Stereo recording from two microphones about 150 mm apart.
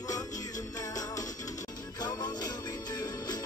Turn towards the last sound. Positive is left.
turn(degrees=25)  # may be behind; listen again after turning